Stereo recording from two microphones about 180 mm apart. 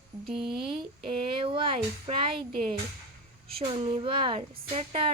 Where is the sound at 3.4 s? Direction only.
30° right (ahead or behind).